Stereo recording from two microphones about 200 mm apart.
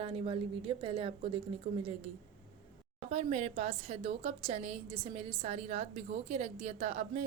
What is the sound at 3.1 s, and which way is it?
A woman's voice, 30° right (ahead or behind).